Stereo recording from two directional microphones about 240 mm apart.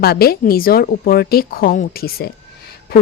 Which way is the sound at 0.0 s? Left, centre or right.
Left.